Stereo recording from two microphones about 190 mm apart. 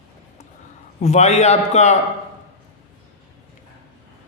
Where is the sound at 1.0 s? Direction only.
35° left (ahead or behind).